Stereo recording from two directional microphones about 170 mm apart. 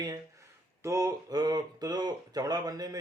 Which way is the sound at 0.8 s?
20° right (ahead or behind).